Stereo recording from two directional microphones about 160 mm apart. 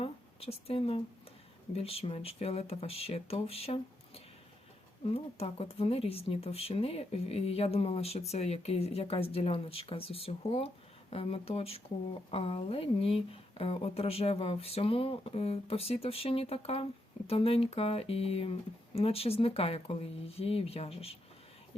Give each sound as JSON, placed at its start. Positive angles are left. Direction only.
{"t": 0.0, "sound": "speech", "side_deg": 40}